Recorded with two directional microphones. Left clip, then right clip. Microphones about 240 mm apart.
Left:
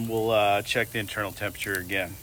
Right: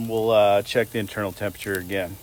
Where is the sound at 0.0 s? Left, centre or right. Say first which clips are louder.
Right 5 dB; right.